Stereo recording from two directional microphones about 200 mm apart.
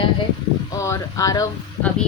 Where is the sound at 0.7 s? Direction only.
15° left (ahead or behind).